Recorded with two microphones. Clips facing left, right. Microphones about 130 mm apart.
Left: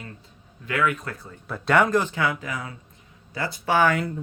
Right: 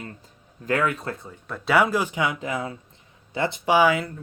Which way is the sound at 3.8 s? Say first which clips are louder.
Right 1 dB; 5° right (ahead or behind).